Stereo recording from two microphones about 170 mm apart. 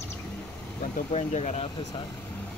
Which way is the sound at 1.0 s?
45° left (ahead or behind).